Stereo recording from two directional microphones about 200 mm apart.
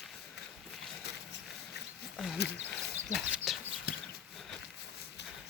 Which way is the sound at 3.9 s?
50° left (ahead or behind).